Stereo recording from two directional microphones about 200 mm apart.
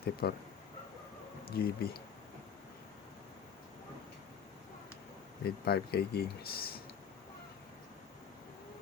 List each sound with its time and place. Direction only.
0.0 s speech: 50° left (ahead or behind)
1.5 s speech: 50° left (ahead or behind)
5.5 s speech: 50° left (ahead or behind)